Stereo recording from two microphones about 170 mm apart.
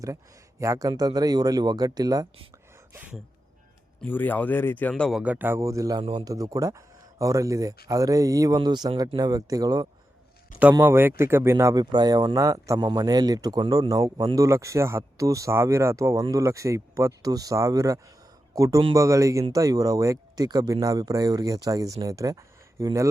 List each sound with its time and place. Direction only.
0.6 s speech: 20° right (ahead or behind)
2.9 s speech: 10° right (ahead or behind)
4.0 s speech: 10° left (ahead or behind)
5.2 s a man's voice: 10° right (ahead or behind)